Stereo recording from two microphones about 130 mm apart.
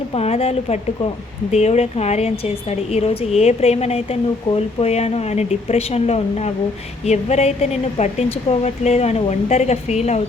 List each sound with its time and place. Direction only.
0.1 s a woman's voice: 50° left (ahead or behind)